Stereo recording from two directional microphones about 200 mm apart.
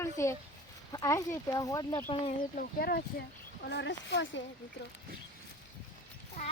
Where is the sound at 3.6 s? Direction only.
60° left (ahead or behind).